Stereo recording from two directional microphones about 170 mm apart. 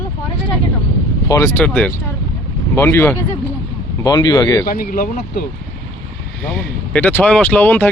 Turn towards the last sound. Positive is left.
turn(degrees=10)  # may be behind; listen again after turning